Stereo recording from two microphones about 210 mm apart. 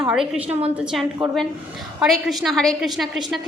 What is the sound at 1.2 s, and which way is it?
Speech, 25° right (ahead or behind).